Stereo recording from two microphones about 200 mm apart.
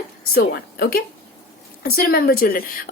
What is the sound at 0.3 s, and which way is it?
A woman's voice, 50° left (ahead or behind).